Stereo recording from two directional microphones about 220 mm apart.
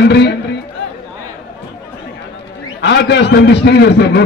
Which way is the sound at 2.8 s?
50° left (ahead or behind).